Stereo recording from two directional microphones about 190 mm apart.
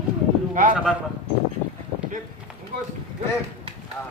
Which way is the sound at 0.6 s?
45° right (ahead or behind).